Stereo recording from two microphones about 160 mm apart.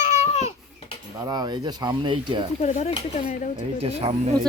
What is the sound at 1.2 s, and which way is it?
Speech, 25° right (ahead or behind).